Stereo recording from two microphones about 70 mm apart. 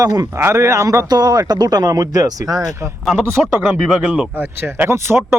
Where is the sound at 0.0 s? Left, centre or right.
Right.